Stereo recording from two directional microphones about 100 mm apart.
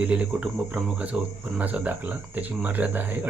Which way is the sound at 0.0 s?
10° right (ahead or behind).